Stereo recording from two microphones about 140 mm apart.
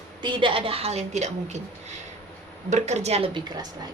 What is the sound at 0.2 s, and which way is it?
A woman's voice, 35° right (ahead or behind).